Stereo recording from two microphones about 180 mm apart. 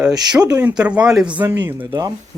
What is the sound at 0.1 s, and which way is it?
Speech, 20° right (ahead or behind).